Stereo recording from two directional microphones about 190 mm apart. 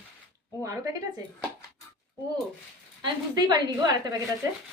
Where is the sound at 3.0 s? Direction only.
25° right (ahead or behind).